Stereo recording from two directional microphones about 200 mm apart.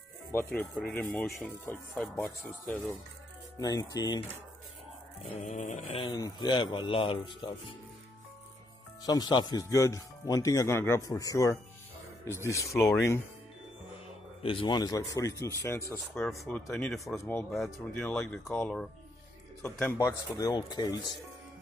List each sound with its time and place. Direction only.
0.3 s speech: 10° left (ahead or behind)
3.5 s speech: 20° left (ahead or behind)
5.4 s mantra: 35° left (ahead or behind)
6.0 s speech: 20° left (ahead or behind)
9.0 s speech: 20° left (ahead or behind)
14.4 s speech: 25° left (ahead or behind)
15.9 s speech: centre (ahead or behind); by 21.0 s 20° left (ahead or behind)